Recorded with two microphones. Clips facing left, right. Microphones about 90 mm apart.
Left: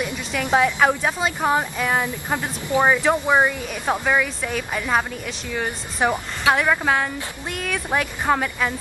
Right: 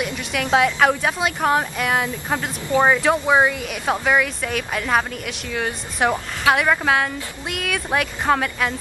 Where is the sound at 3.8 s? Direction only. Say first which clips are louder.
Right 1 dB; centre (ahead or behind).